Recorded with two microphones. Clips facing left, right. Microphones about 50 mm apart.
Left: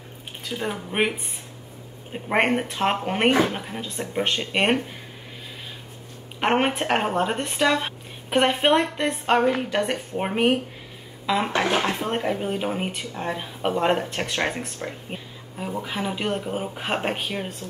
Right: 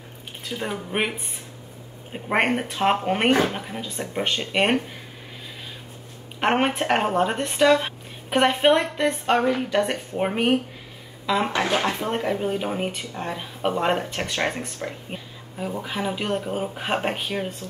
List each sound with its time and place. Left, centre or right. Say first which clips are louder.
0.5 s speech: even; centre
6.4 s speech: even; centre
11.6 s speech: even; left
11.9 s speech: even; centre